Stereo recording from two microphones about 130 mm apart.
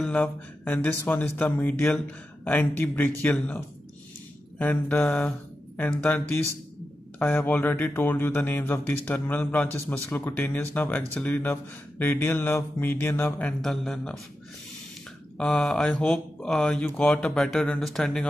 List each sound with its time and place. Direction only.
0.0 s speech: 10° left (ahead or behind)
15.3 s speech: 5° left (ahead or behind)